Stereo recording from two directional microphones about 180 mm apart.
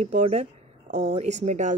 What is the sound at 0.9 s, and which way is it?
Speech, 70° right (ahead or behind).